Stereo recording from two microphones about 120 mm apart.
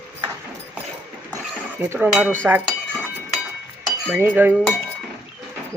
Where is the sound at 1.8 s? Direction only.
20° right (ahead or behind).